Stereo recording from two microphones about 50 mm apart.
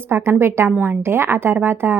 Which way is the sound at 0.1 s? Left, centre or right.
Right.